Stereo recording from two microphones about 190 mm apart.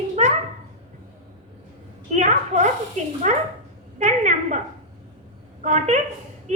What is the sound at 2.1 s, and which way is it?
A woman's voice, 40° right (ahead or behind).